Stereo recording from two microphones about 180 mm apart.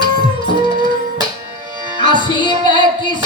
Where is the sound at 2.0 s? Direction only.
25° left (ahead or behind).